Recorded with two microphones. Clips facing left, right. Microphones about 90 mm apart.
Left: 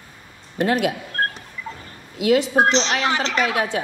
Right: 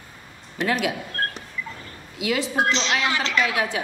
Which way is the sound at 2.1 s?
40° left (ahead or behind).